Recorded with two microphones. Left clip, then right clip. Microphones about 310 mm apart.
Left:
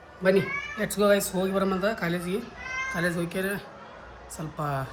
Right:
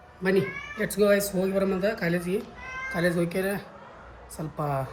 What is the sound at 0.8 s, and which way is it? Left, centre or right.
Speech, centre.